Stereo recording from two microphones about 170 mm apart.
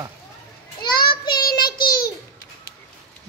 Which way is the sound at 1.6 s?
60° left (ahead or behind).